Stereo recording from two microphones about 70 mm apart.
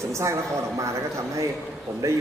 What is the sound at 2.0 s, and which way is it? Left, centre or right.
Speech, right.